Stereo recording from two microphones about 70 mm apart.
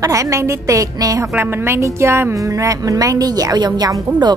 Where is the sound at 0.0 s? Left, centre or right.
Right.